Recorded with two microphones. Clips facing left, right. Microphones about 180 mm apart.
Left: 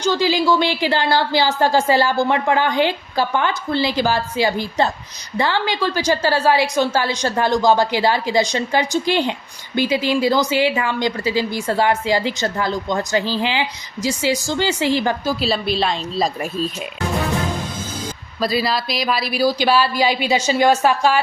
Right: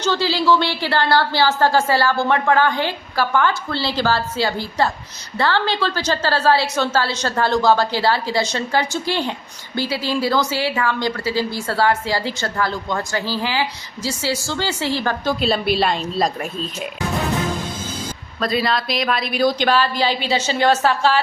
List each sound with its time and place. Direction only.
0.0 s a woman's voice: 15° left (ahead or behind)
15.3 s a woman's voice: centre (ahead or behind)
18.3 s a woman's voice: 5° left (ahead or behind)